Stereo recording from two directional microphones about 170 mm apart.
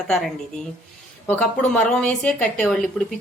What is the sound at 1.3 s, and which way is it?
Speech, 10° left (ahead or behind).